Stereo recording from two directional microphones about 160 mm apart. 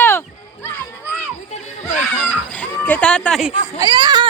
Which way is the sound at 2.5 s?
10° left (ahead or behind).